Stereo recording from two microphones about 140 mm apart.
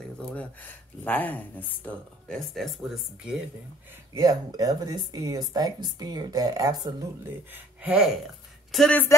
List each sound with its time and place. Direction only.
0.2 s speech: 10° left (ahead or behind)
4.1 s speech: 25° right (ahead or behind)
7.5 s speech: 10° right (ahead or behind)
8.7 s speech: 5° left (ahead or behind)